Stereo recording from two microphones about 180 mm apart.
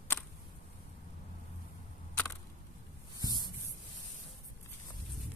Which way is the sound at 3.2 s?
25° right (ahead or behind).